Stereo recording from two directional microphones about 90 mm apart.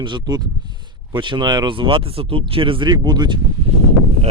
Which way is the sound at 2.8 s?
50° right (ahead or behind).